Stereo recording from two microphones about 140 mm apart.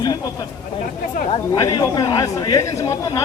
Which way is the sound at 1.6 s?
25° left (ahead or behind).